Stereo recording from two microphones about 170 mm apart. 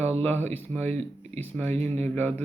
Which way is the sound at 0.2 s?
10° left (ahead or behind).